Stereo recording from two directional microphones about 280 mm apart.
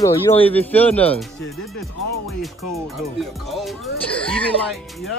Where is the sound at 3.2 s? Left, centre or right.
Centre.